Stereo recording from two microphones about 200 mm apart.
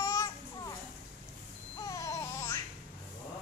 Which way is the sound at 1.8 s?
15° left (ahead or behind).